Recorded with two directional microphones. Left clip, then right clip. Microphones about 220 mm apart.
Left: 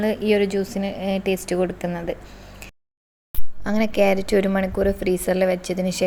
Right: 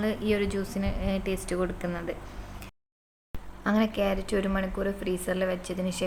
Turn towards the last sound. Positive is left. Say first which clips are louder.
# left 8 dB
turn(degrees=25)  # may be behind; listen again after turning